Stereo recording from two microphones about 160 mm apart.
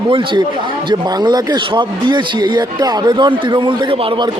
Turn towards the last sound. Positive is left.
turn(degrees=-30)  # may be behind; listen again after turning